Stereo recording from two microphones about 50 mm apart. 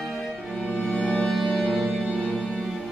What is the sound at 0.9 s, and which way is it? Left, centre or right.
Music, centre.